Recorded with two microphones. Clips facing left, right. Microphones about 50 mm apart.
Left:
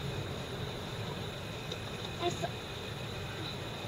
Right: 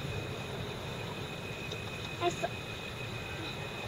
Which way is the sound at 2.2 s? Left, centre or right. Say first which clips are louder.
Right 3 dB; right.